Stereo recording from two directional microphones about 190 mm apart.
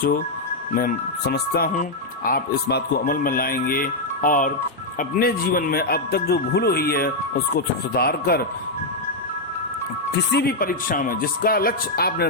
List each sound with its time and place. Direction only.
0.7 s speech: 50° left (ahead or behind)
10.3 s speech: 50° left (ahead or behind)